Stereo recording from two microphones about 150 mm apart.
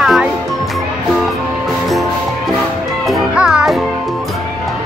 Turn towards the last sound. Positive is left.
turn(degrees=-5)  # may be behind; listen again after turning